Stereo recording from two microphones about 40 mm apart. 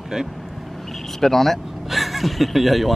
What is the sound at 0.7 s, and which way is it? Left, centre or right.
Vehicle, centre.